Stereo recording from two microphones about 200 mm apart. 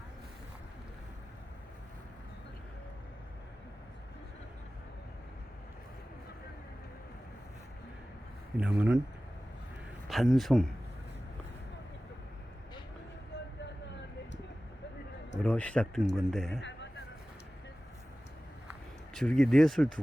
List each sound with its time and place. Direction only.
8.5 s speech: 5° right (ahead or behind)
10.1 s speech: centre (ahead or behind)
15.4 s speech: 5° left (ahead or behind)
16.6 s a sound: 65° left (ahead or behind)
19.1 s speech: 5° left (ahead or behind)